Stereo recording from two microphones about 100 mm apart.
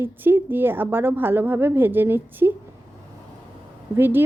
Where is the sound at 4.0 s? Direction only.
20° right (ahead or behind).